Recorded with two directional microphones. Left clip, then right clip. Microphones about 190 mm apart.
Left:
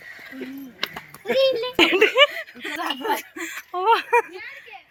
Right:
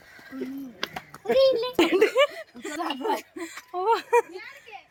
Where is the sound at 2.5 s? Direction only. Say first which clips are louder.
Left 2 dB; 5° left (ahead or behind).